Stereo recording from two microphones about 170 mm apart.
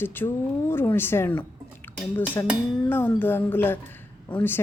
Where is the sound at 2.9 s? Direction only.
10° left (ahead or behind).